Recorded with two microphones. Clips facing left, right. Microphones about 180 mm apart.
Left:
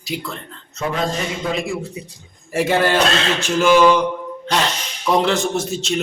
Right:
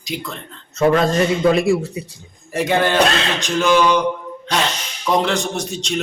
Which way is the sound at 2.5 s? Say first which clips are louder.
Even; 5° left (ahead or behind).